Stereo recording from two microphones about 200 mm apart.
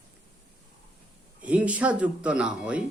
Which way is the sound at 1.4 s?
5° right (ahead or behind).